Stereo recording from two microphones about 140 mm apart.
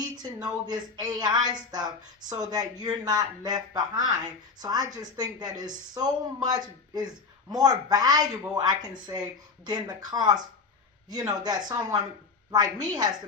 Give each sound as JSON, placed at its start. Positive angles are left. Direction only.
{"t": 0.2, "sound": "speech", "side_deg": -30}